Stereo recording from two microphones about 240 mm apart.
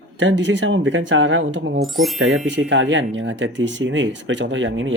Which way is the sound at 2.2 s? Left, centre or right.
Right.